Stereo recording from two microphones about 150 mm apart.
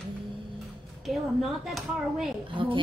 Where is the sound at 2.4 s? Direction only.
35° right (ahead or behind).